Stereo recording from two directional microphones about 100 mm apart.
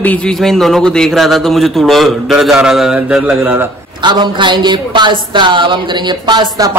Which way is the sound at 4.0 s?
50° right (ahead or behind).